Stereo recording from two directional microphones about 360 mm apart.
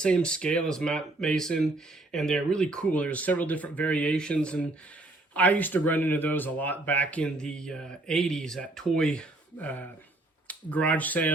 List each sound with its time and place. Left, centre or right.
0.0 s speech: centre